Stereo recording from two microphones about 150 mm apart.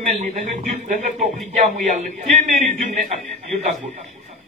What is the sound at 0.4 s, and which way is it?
Speech, 60° right (ahead or behind).